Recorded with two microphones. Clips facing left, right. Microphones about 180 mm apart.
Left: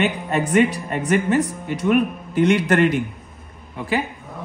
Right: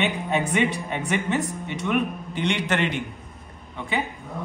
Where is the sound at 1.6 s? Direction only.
5° left (ahead or behind).